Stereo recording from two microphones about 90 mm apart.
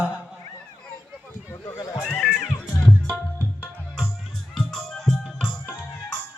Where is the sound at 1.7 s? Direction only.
30° left (ahead or behind).